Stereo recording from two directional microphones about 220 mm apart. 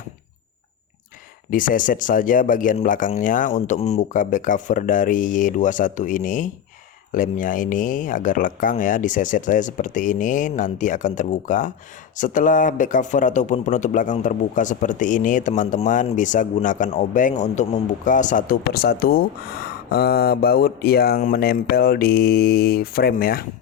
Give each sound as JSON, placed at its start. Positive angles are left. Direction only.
{"t": 1.5, "sound": "speech", "side_deg": 40}